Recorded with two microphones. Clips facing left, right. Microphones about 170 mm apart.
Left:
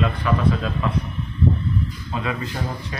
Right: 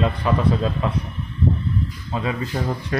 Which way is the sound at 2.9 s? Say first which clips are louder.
Right 10 dB; 55° right (ahead or behind).